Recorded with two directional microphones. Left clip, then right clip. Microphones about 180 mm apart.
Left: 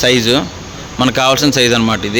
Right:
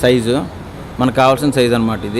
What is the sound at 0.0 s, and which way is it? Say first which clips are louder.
Speech: left 2 dB; centre (ahead or behind).